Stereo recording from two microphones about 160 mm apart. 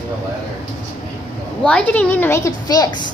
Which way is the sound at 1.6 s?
5° left (ahead or behind).